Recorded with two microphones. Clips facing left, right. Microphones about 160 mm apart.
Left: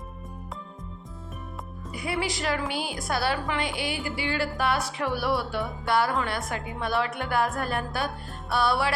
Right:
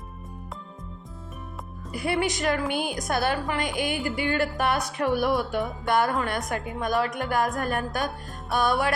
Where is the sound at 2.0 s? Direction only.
50° right (ahead or behind).